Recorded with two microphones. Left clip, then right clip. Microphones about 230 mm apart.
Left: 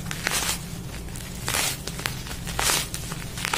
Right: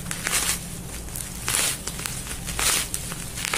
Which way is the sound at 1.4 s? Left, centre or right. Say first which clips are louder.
Even; centre.